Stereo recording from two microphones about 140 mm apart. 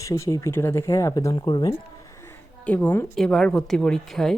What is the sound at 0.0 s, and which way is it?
Speech, 20° left (ahead or behind).